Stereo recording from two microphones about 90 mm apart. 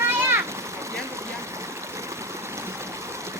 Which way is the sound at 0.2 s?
25° right (ahead or behind).